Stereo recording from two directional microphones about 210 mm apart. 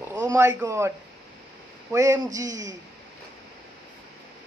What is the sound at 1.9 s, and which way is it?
Speech, 15° right (ahead or behind).